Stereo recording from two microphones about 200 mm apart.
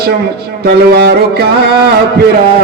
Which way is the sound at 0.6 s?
55° right (ahead or behind).